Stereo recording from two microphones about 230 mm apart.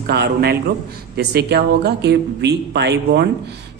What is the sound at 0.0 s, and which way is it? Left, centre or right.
Speech, right.